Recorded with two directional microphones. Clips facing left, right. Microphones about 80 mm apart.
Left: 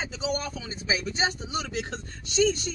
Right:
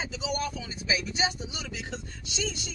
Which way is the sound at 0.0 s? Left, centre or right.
Left.